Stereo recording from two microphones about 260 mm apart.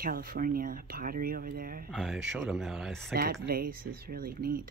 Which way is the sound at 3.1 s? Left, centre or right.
Right.